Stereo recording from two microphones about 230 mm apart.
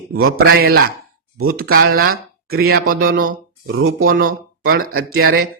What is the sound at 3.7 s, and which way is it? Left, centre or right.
Speech, right.